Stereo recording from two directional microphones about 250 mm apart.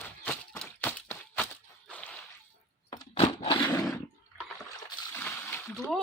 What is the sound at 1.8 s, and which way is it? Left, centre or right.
Whip, centre.